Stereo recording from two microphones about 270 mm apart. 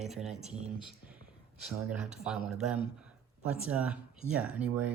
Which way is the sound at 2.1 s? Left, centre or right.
Centre.